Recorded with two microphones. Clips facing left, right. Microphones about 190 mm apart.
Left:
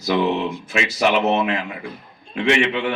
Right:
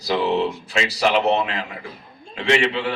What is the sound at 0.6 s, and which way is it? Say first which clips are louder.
A man's voice: left 1 dB; 35° right (ahead or behind).